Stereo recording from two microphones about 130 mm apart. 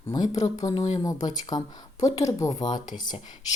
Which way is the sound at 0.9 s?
30° left (ahead or behind).